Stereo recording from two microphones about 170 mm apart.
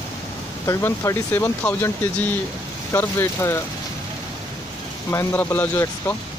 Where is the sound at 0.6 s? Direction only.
15° left (ahead or behind).